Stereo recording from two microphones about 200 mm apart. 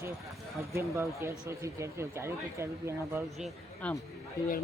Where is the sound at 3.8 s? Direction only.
5° left (ahead or behind).